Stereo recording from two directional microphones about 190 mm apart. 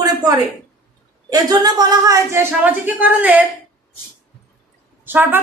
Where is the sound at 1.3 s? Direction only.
20° right (ahead or behind).